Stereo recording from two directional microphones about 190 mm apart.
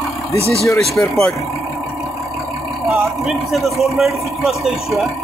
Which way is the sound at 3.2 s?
Centre (ahead or behind).